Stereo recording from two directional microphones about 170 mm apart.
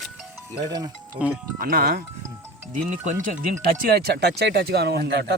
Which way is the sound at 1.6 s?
60° right (ahead or behind).